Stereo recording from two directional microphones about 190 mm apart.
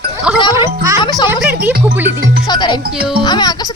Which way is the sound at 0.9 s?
20° left (ahead or behind).